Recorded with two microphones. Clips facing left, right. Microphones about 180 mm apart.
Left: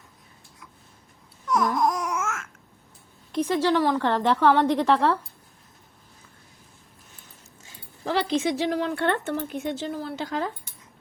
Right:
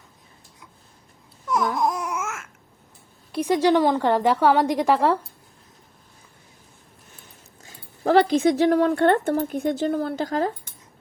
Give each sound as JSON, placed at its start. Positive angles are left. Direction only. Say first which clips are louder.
{"t": 1.5, "sound": "babbling", "louder": "even", "side_deg": -10}
{"t": 3.3, "sound": "a woman's voice", "louder": "right 3 dB", "side_deg": -10}
{"t": 7.6, "sound": "speech", "louder": "right 8 dB", "side_deg": -50}